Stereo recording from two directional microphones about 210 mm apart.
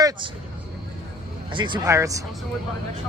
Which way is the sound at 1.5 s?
20° right (ahead or behind).